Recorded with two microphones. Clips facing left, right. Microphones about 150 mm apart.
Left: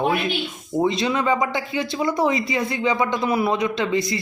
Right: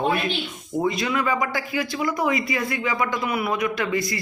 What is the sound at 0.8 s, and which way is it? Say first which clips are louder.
Speech: left 3 dB; 25° left (ahead or behind).